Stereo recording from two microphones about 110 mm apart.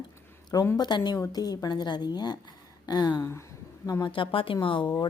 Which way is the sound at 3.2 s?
25° left (ahead or behind).